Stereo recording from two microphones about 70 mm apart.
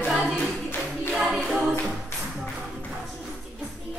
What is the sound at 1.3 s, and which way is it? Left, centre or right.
A capella, centre.